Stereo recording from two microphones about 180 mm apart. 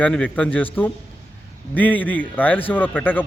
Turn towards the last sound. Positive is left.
turn(degrees=10)  # may be behind; listen again after turning